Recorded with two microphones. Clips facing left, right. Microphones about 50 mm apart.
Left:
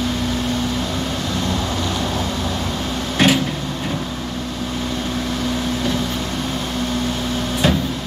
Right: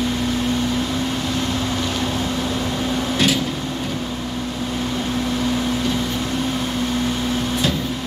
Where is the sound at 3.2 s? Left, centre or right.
Left.